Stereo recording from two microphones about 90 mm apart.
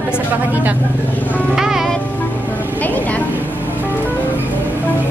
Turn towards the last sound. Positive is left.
turn(degrees=20)  # may be behind; listen again after turning